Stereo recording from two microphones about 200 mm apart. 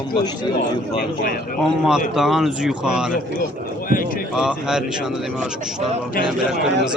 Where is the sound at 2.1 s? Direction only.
Centre (ahead or behind).